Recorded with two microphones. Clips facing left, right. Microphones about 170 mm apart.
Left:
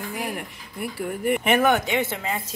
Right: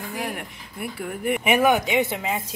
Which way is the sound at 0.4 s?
Centre (ahead or behind).